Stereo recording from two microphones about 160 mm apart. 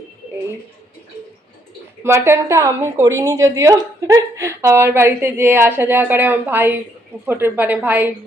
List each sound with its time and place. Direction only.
2.0 s a woman's voice: 15° right (ahead or behind)